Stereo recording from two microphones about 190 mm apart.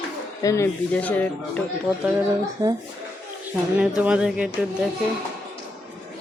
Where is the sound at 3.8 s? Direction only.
5° right (ahead or behind).